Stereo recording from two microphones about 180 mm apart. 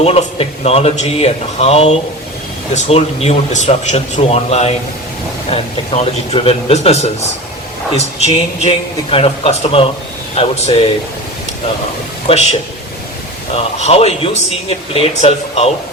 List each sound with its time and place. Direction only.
0.0 s speech: 35° left (ahead or behind)
12.3 s speech: 35° left (ahead or behind)
13.7 s speech: 35° left (ahead or behind)